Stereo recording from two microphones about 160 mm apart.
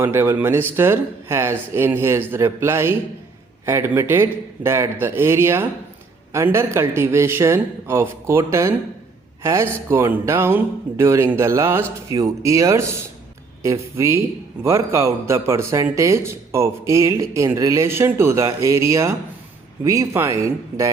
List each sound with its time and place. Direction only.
0.0 s speech: 15° right (ahead or behind)